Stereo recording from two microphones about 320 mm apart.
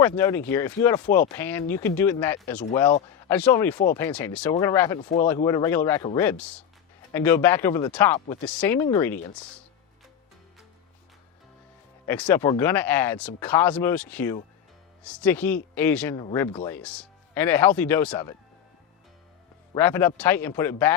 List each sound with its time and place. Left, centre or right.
0.0 s speech: centre
4.9 s speech: left; by 9.5 s centre
12.0 s speech: centre
19.7 s speech: centre